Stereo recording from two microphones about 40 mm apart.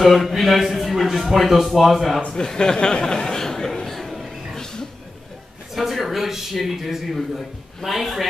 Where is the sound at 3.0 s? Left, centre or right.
Centre.